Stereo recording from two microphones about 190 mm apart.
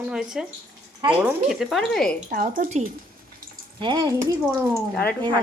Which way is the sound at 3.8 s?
25° right (ahead or behind).